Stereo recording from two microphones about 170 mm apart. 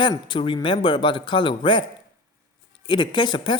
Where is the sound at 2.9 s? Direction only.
25° left (ahead or behind).